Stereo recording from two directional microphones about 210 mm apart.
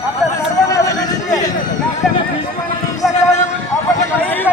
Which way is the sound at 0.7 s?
15° left (ahead or behind).